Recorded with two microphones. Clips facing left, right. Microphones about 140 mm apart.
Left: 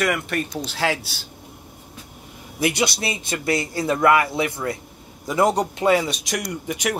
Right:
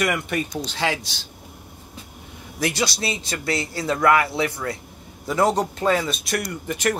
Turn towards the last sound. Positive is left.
turn(degrees=10)  # may be behind; listen again after turning